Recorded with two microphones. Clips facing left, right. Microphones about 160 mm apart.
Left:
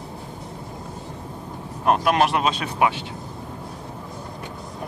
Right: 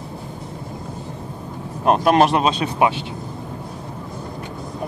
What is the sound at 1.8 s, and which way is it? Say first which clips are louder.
Speech: right 4 dB; 30° right (ahead or behind).